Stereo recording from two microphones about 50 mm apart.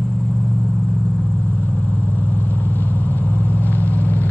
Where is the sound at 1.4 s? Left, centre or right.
Left.